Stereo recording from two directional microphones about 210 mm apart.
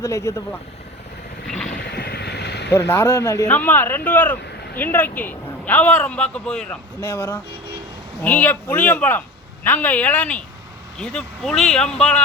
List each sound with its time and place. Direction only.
0.0 s a man's voice: 15° left (ahead or behind)
1.5 s vehicle: 5° left (ahead or behind)
1.9 s vehicle: 50° left (ahead or behind)
2.6 s a man's voice: 10° left (ahead or behind)